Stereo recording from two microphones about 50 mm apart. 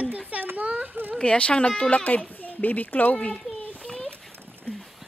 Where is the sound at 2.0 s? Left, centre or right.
Left.